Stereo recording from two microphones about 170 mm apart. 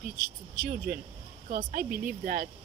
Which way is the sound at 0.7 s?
60° right (ahead or behind).